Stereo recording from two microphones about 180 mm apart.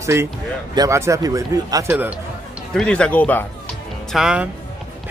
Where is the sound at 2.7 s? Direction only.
5° left (ahead or behind).